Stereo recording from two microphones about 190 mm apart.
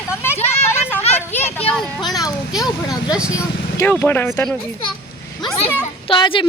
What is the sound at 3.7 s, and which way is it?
Speech, 10° left (ahead or behind).